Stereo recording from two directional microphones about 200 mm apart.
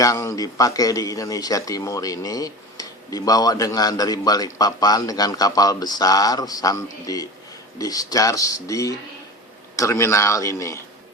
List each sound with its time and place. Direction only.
0.0 s a man's voice: 15° left (ahead or behind)